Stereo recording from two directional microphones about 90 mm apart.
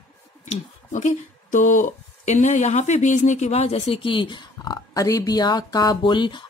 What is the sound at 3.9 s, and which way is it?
Speech, 70° left (ahead or behind).